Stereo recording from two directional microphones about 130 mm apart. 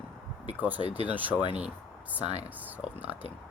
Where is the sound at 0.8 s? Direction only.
50° right (ahead or behind).